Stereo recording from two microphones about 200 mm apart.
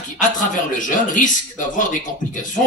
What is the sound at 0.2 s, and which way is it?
A man's voice, 40° left (ahead or behind).